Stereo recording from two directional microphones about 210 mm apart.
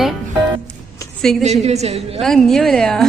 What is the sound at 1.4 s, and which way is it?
Speech, 30° right (ahead or behind).